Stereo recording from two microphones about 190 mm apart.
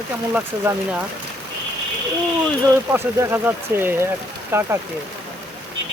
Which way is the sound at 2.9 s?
10° right (ahead or behind).